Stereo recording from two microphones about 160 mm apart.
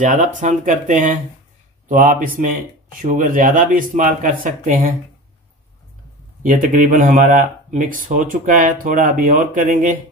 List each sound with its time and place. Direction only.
0.0 s speech: 50° right (ahead or behind)
6.4 s speech: 55° right (ahead or behind)